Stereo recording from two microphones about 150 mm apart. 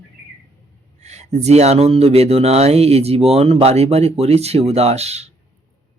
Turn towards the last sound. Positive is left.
turn(degrees=-45)  # may be behind; listen again after turning